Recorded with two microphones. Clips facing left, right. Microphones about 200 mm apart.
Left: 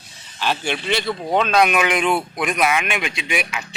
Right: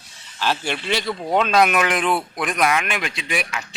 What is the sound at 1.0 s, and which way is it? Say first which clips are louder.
Speech: right 1 dB; 5° left (ahead or behind).